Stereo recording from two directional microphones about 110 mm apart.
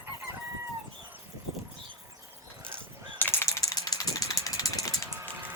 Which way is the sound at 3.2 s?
20° left (ahead or behind).